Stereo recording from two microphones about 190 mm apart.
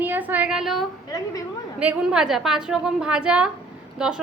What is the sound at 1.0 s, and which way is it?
Speech, 15° left (ahead or behind).